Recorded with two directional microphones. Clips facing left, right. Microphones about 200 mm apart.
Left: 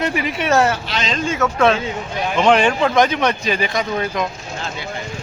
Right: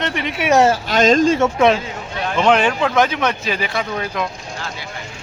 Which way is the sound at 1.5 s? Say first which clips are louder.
Right 1 dB; 15° right (ahead or behind).